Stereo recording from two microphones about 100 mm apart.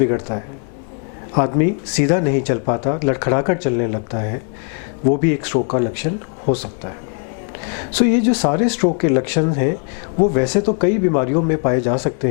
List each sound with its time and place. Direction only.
0.0 s speech: 15° left (ahead or behind)
7.9 s speech: 10° left (ahead or behind)